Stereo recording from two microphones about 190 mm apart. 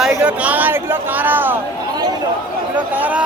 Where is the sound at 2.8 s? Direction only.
10° right (ahead or behind).